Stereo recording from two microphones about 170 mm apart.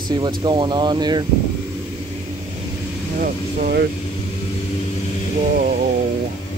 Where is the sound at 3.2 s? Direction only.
60° right (ahead or behind).